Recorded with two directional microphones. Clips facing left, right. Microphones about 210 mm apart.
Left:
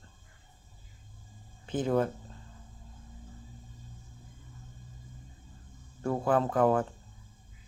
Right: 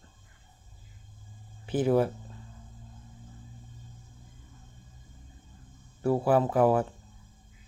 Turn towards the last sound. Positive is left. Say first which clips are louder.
# right 2 dB
turn(degrees=-10)  # may be behind; listen again after turning